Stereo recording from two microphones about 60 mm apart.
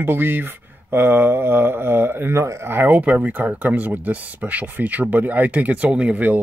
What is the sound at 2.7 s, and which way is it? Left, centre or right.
Speech, right.